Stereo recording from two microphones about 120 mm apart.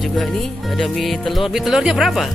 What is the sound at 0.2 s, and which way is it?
Speech, centre (ahead or behind).